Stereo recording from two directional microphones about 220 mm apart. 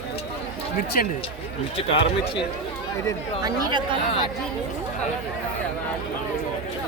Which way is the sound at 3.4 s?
15° right (ahead or behind).